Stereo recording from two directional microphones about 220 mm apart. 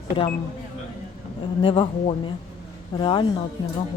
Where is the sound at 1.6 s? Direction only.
25° left (ahead or behind).